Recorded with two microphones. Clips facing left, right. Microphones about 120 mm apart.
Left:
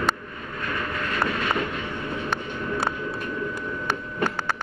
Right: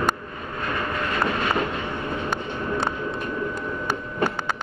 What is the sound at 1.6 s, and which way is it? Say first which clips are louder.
Train: right 2 dB; 35° right (ahead or behind).